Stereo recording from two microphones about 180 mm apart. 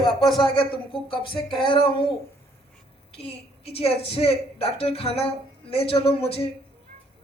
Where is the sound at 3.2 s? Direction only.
35° left (ahead or behind).